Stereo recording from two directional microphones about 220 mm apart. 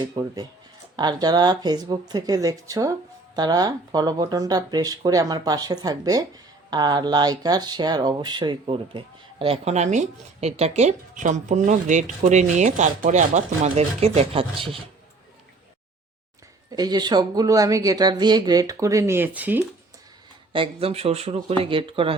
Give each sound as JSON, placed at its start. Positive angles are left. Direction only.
{"t": 0.0, "sound": "speech", "side_deg": -20}
{"t": 16.7, "sound": "speech", "side_deg": -20}
{"t": 20.5, "sound": "speech", "side_deg": -25}